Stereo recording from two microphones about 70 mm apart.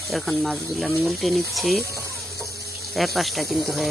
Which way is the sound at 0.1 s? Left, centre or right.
Centre.